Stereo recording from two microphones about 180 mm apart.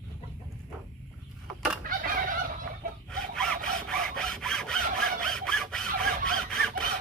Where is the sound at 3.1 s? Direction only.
5° left (ahead or behind).